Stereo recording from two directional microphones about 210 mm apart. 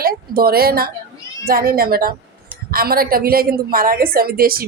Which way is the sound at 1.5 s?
45° right (ahead or behind).